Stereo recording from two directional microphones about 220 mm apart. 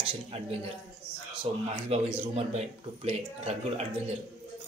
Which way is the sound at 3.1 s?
30° right (ahead or behind).